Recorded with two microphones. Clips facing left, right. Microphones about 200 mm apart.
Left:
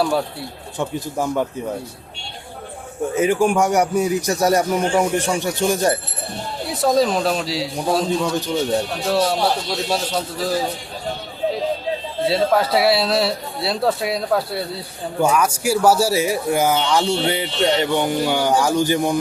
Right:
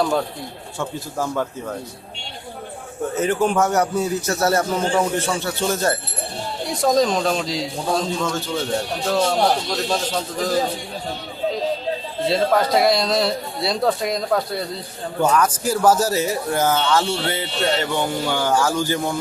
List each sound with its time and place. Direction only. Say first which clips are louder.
0.8 s speech: left 3 dB; 15° left (ahead or behind)
3.2 s speech: left 2 dB; 10° left (ahead or behind)
6.7 s speech: left 1 dB; 5° left (ahead or behind)
7.9 s speech: left 4 dB; 15° left (ahead or behind)
12.2 s speech: left 1 dB; 5° left (ahead or behind)